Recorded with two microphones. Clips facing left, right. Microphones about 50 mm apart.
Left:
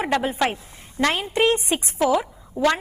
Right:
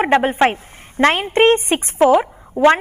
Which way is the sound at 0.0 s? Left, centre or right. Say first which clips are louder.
Right 7 dB; right.